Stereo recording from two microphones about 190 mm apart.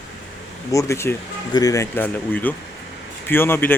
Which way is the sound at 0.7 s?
15° left (ahead or behind).